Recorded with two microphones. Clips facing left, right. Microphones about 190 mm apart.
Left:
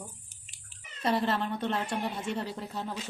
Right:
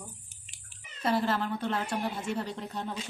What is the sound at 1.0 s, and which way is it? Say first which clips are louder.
Speech: even; centre (ahead or behind).